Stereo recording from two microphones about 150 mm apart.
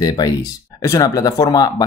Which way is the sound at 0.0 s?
25° left (ahead or behind).